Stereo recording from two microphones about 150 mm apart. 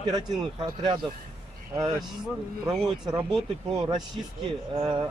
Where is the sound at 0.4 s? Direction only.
30° right (ahead or behind).